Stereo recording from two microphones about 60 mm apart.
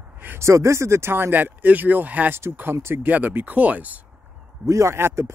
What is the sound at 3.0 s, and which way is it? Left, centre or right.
Speech, right.